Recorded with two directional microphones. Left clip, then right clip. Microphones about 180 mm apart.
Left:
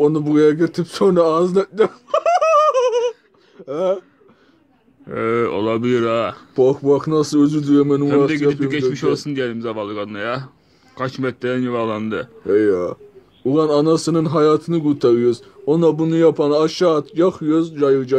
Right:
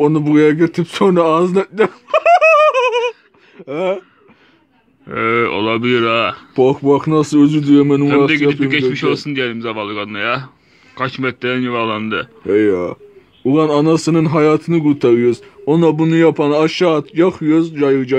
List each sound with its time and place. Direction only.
0.0 s a man's voice: 40° right (ahead or behind)
5.0 s speech: centre (ahead or behind)
6.7 s speech: 40° right (ahead or behind)
8.3 s speech: centre (ahead or behind)
12.4 s speech: 40° right (ahead or behind)